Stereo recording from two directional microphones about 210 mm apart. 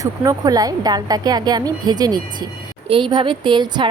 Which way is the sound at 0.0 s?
15° right (ahead or behind).